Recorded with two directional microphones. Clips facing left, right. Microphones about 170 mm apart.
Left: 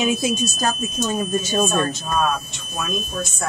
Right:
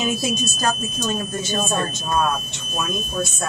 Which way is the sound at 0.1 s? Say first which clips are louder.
Left 2 dB; 10° left (ahead or behind).